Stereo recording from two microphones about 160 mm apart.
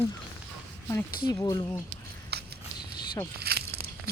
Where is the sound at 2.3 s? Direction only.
90° right.